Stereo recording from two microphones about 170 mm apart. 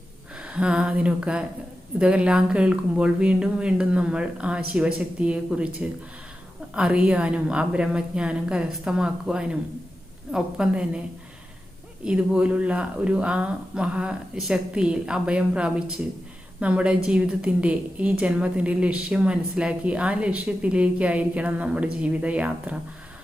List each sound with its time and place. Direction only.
0.3 s a woman's voice: 5° right (ahead or behind)
12.0 s a woman's voice: 5° right (ahead or behind)